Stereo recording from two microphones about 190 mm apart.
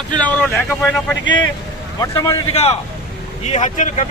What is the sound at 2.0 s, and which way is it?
Speech, 15° left (ahead or behind).